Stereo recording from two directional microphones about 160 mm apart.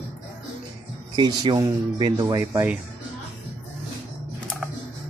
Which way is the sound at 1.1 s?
25° right (ahead or behind).